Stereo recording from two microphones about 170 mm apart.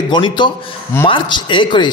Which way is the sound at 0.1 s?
30° left (ahead or behind).